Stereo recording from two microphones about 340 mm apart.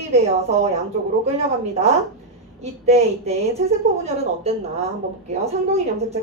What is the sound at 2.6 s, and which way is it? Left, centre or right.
A woman's voice, centre.